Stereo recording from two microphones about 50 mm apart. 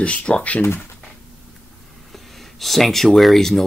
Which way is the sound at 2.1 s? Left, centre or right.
Centre.